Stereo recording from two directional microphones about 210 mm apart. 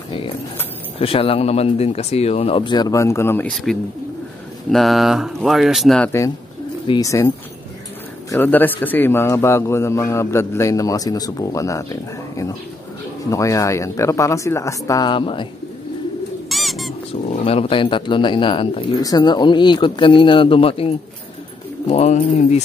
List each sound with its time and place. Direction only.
0.9 s a man's voice: 25° left (ahead or behind)
13.3 s a man's voice: 15° left (ahead or behind)
16.4 s bird: centre (ahead or behind)
17.3 s speech: 30° left (ahead or behind)